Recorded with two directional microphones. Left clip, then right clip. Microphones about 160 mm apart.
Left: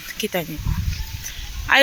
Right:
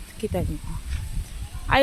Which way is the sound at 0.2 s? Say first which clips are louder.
Left 4 dB; centre (ahead or behind).